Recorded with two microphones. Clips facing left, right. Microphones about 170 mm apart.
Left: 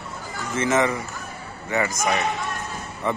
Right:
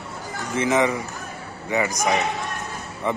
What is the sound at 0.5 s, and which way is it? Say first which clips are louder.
Speech: right 1 dB; 15° right (ahead or behind).